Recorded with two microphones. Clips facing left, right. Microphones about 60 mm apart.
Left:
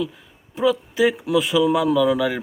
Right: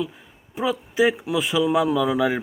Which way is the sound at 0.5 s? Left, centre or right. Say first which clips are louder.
Left 3 dB; centre.